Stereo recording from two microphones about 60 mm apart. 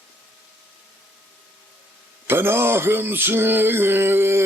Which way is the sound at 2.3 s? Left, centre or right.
Right.